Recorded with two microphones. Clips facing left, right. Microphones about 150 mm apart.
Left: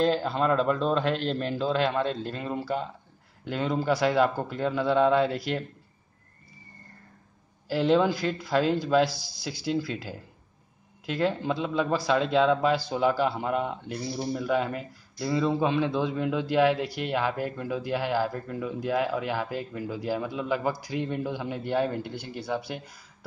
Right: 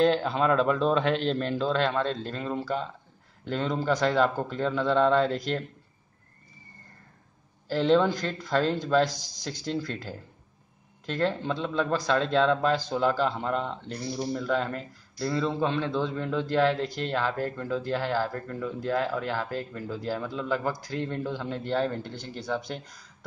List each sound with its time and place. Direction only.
0.0 s a man's voice: centre (ahead or behind)
7.6 s speech: 10° left (ahead or behind)